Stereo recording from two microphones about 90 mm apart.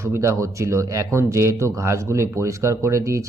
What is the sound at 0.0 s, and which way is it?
Speech, 30° right (ahead or behind).